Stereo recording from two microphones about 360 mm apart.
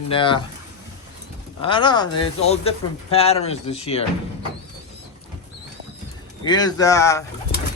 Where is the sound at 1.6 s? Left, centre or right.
Centre.